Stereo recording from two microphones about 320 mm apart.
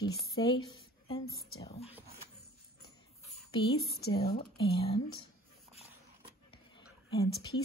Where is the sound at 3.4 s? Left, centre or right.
Centre.